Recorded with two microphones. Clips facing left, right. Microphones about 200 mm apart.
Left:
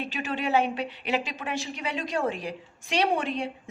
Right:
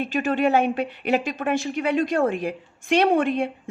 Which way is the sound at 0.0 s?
50° right (ahead or behind).